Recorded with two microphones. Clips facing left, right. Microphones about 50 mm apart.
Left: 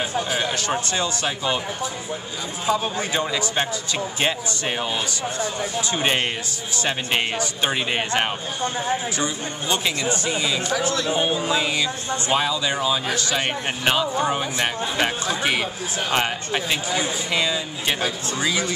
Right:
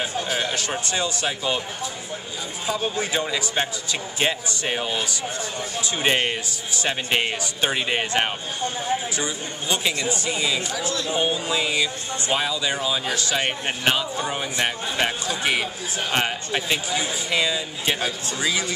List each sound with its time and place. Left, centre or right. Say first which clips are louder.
0.0 s speech: left 2 dB; centre
2.6 s speech: left 3 dB; centre
10.8 s speech: left 3 dB; left
11.3 s speech: left 1 dB; centre